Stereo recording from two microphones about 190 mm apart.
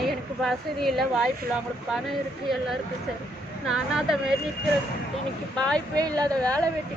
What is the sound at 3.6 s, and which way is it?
Speech, 5° right (ahead or behind).